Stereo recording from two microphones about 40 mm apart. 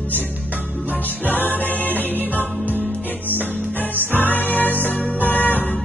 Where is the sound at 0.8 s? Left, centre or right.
Left.